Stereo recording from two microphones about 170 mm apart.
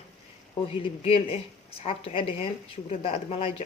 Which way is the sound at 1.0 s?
35° left (ahead or behind).